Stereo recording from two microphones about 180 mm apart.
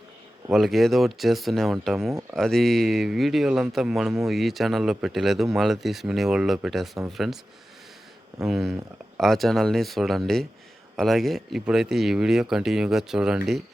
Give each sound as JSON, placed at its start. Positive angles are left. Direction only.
{"t": 0.5, "sound": "speech", "side_deg": 0}
{"t": 8.4, "sound": "speech", "side_deg": 0}